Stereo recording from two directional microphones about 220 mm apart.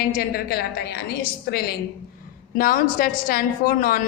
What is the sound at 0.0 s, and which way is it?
A woman's voice, 45° left (ahead or behind).